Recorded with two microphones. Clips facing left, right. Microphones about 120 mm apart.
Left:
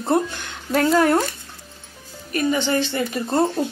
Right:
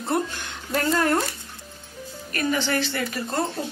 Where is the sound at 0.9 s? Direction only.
15° left (ahead or behind).